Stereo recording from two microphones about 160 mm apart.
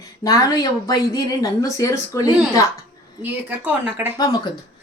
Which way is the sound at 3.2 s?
10° right (ahead or behind).